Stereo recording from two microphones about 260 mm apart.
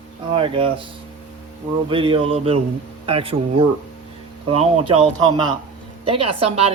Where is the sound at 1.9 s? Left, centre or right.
Centre.